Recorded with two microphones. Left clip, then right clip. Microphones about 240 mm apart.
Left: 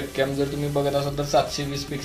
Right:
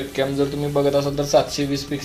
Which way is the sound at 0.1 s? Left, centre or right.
Centre.